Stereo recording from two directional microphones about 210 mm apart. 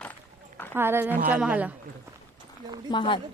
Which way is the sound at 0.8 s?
10° right (ahead or behind).